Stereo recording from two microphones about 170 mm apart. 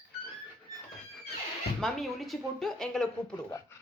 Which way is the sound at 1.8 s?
Centre (ahead or behind).